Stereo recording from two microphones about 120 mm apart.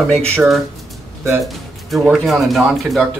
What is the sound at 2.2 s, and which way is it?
Speech, centre (ahead or behind).